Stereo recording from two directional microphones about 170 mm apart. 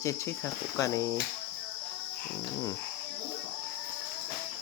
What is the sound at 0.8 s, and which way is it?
Speech, 20° left (ahead or behind).